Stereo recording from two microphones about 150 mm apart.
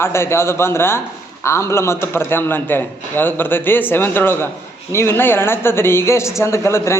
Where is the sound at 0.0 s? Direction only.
15° left (ahead or behind).